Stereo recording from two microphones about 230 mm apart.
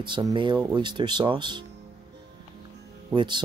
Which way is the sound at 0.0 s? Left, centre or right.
Centre.